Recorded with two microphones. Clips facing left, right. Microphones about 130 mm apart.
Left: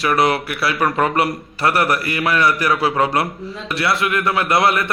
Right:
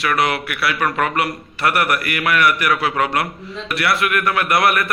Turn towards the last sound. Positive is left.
turn(degrees=25)  # may be behind; listen again after turning